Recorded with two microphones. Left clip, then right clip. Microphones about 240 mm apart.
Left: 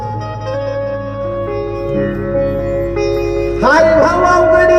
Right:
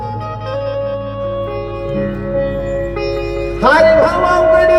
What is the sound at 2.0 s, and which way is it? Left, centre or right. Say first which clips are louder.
Music: left 2 dB; left.